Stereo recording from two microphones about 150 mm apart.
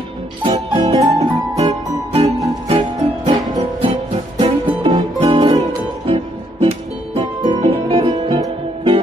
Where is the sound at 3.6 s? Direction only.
35° right (ahead or behind).